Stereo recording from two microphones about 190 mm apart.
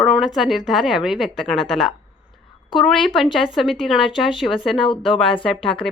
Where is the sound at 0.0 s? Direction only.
5° right (ahead or behind).